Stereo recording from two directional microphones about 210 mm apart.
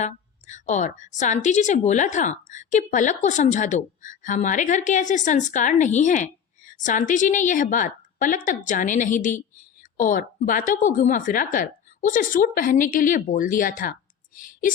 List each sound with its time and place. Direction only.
0.0 s a woman's voice: 35° left (ahead or behind)